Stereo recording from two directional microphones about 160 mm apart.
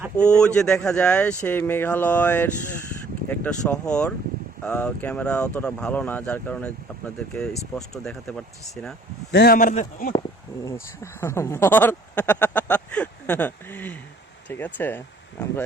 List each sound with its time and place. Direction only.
0.2 s speech: 5° left (ahead or behind)
9.3 s speech: 80° left; by 10.1 s 55° left (ahead or behind)
10.7 s speech: 15° left (ahead or behind)